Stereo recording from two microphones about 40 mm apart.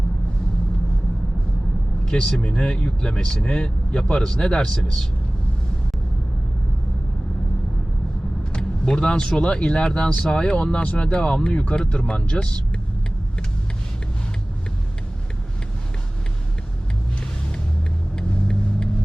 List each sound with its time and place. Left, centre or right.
2.0 s a man's voice: left
8.5 s vehicle: left
9.4 s speech: left
18.2 s vehicle: left